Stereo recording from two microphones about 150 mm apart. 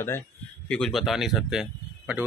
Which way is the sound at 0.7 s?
5° left (ahead or behind).